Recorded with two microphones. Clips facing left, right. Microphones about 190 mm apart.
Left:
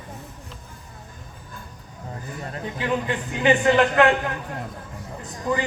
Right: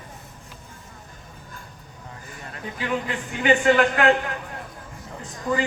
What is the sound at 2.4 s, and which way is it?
A man's voice, 35° left (ahead or behind).